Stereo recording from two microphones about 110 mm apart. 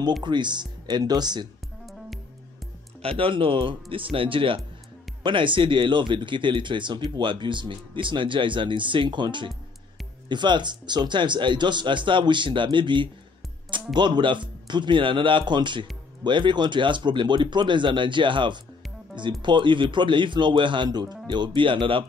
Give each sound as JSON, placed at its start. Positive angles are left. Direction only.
{"t": 0.2, "sound": "speech", "side_deg": -45}
{"t": 3.0, "sound": "speech", "side_deg": -60}